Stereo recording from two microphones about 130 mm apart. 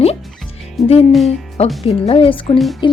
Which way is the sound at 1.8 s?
45° left (ahead or behind).